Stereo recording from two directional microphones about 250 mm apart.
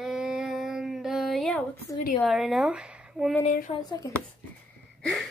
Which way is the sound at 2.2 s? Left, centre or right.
Centre.